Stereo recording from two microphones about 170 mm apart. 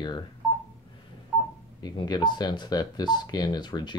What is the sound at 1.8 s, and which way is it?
Speech, 25° left (ahead or behind).